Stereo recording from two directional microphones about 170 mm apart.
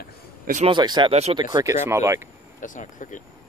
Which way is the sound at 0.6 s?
25° right (ahead or behind).